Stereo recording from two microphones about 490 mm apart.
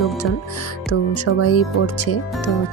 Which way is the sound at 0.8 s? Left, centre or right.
Left.